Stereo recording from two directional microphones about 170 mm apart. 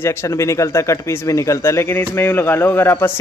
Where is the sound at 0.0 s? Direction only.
15° left (ahead or behind).